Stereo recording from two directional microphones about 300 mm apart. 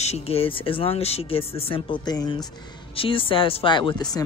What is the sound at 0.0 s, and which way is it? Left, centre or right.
A man's voice, centre.